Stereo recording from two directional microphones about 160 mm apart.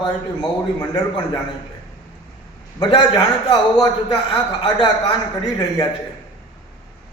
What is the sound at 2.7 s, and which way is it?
A man's voice, 25° left (ahead or behind).